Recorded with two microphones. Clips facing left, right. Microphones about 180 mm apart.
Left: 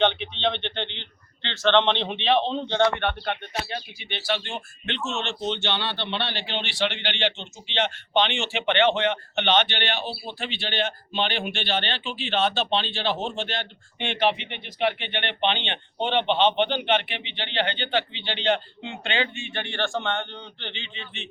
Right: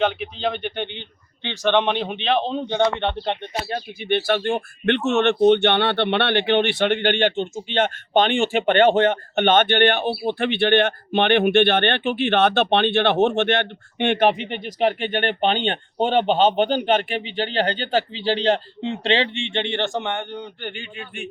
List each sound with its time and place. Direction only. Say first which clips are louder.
0.0 s speech: right 1 dB; 5° right (ahead or behind); by 3.6 s 25° right (ahead or behind)
3.7 s speech: right 11 dB; 50° right (ahead or behind); by 21.0 s 10° right (ahead or behind)